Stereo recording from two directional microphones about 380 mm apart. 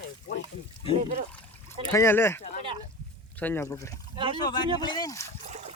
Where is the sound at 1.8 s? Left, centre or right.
Centre.